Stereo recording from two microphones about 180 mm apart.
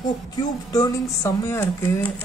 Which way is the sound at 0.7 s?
15° left (ahead or behind).